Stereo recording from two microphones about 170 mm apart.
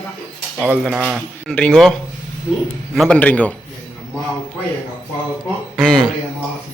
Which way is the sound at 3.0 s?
5° left (ahead or behind).